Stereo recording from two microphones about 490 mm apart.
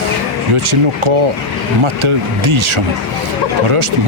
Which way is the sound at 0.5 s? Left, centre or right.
Right.